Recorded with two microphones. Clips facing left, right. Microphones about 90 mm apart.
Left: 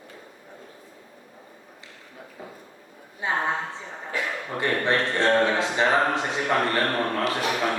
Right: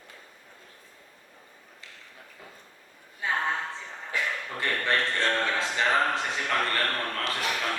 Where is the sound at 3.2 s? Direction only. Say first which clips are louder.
Left 3 dB; 20° left (ahead or behind).